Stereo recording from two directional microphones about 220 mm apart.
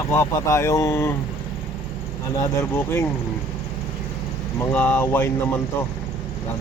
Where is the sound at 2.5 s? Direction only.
10° left (ahead or behind).